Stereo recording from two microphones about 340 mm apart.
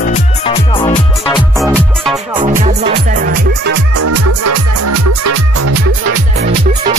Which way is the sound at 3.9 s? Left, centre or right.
Right.